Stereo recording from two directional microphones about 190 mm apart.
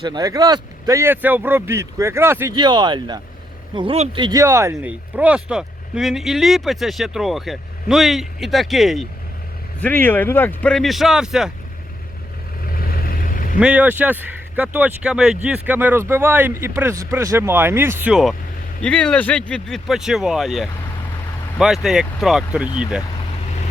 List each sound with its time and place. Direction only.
0.0 s speech: 20° right (ahead or behind)
2.6 s speech: 25° right (ahead or behind); by 9.0 s centre (ahead or behind)
9.8 s speech: 10° left (ahead or behind)
12.6 s vehicle: 50° left (ahead or behind)
13.6 s speech: 5° right (ahead or behind)